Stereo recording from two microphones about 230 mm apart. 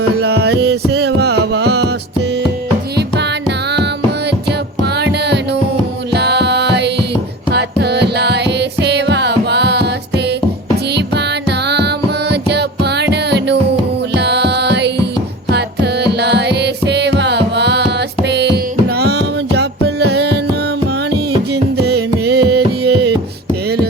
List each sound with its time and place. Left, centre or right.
0.1 s music: right
4.9 s music: right
21.5 s carnatic music: right